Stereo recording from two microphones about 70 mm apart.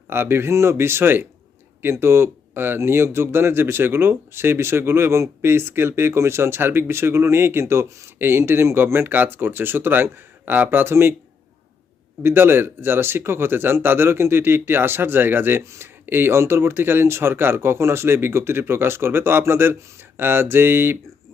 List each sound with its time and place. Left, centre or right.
0.1 s speech: right
12.2 s speech: right